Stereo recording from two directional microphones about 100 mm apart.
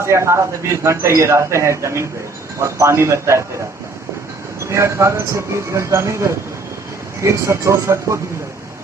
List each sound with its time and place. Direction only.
0.0 s speech: 30° right (ahead or behind)
4.7 s speech: 30° right (ahead or behind)